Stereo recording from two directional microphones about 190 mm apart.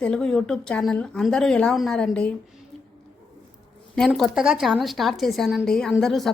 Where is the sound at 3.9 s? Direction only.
Centre (ahead or behind).